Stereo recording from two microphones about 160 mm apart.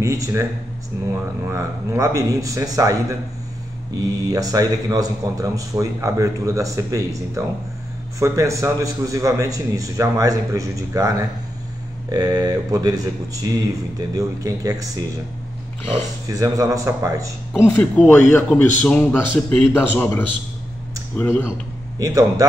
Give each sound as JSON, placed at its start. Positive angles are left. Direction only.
{"t": 0.0, "sound": "speech", "side_deg": -20}
{"t": 1.5, "sound": "a man's voice", "side_deg": -20}
{"t": 16.3, "sound": "a man's voice", "side_deg": -20}
{"t": 17.6, "sound": "a man's voice", "side_deg": 10}
{"t": 21.9, "sound": "a man's voice", "side_deg": -20}